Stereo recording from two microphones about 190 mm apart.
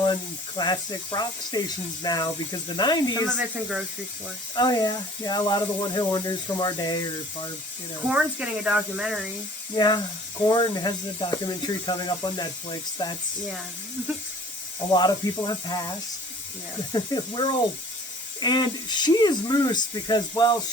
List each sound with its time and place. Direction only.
0.0 s speech: 25° left (ahead or behind)
3.3 s speech: 5° right (ahead or behind)
4.5 s speech: 20° left (ahead or behind)
8.1 s speech: 5° right (ahead or behind)
9.7 s speech: 20° left (ahead or behind)
14.9 s speech: 20° left (ahead or behind)
16.9 s speech: 25° left (ahead or behind)